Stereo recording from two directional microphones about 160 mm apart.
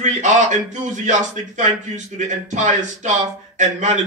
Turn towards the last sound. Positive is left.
turn(degrees=-50)  # may be behind; listen again after turning